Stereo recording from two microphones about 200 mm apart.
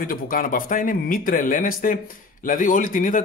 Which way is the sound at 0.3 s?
45° left (ahead or behind).